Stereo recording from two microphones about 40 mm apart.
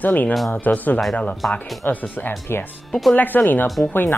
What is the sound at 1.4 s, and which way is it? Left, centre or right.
Speech, centre.